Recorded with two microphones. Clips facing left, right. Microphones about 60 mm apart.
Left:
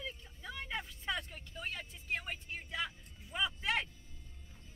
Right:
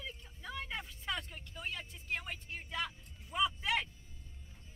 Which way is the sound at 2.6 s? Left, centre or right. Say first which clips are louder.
Right 1 dB; centre.